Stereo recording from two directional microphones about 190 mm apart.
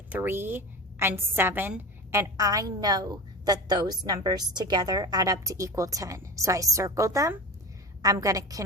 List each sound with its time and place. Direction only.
0.1 s a woman's voice: 10° right (ahead or behind)